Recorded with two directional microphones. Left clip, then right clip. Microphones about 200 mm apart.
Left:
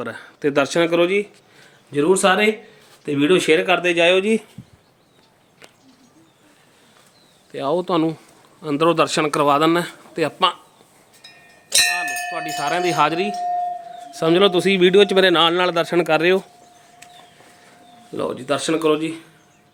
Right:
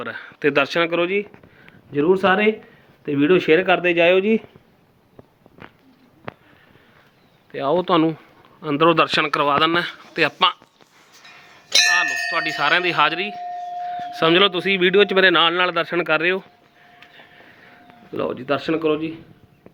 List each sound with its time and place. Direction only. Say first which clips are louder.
0.0 s speech: right 1 dB; 10° left (ahead or behind)
7.5 s speech: right 2 dB; 10° left (ahead or behind)
11.9 s cowbell: right 4 dB; centre (ahead or behind)
14.1 s speech: even; 10° left (ahead or behind)
18.1 s speech: even; 10° left (ahead or behind)